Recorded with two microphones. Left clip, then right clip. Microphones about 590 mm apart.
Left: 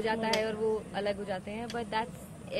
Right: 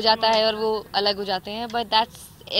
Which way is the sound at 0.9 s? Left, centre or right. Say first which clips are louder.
Right 11 dB; right.